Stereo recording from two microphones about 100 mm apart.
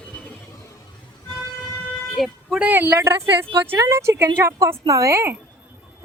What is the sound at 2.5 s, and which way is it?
A woman's voice, 15° right (ahead or behind).